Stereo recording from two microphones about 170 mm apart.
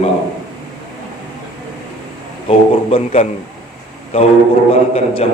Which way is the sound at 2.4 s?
35° left (ahead or behind).